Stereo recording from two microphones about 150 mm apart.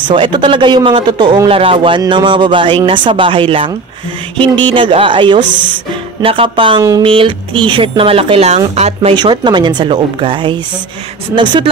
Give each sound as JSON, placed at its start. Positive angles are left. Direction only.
{"t": 0.1, "sound": "a man's voice", "side_deg": -35}
{"t": 9.1, "sound": "a man's voice", "side_deg": -30}